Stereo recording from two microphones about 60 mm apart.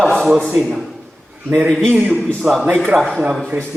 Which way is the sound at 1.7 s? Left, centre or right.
Centre.